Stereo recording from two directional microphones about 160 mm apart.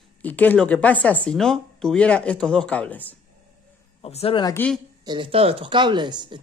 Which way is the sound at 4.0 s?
40° left (ahead or behind).